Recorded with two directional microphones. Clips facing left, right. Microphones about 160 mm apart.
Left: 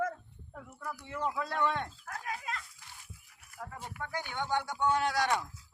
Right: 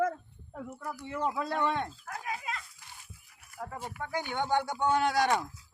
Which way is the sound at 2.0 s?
10° right (ahead or behind).